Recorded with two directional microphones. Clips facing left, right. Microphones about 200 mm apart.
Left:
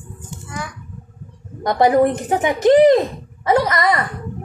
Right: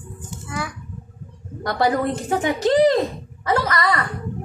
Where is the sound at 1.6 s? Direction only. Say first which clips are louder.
Left 6 dB; 20° left (ahead or behind).